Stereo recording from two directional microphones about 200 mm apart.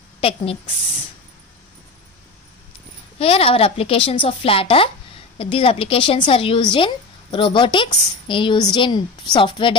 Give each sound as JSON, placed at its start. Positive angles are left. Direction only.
{"t": 0.2, "sound": "a woman's voice", "side_deg": 30}
{"t": 3.2, "sound": "a woman's voice", "side_deg": 30}